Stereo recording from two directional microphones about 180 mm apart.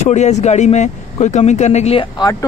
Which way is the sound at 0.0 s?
40° left (ahead or behind).